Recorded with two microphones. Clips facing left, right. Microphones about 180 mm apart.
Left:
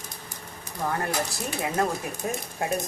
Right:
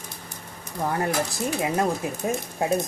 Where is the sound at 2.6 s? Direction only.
20° right (ahead or behind).